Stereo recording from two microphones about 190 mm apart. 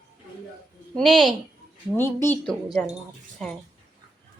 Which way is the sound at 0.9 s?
5° left (ahead or behind).